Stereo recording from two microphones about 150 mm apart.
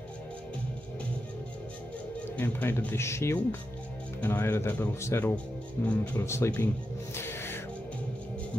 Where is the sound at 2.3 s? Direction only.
15° left (ahead or behind).